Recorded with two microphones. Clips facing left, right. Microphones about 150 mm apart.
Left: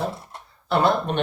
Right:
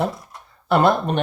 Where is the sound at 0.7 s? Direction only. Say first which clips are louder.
Right 4 dB; 55° right (ahead or behind).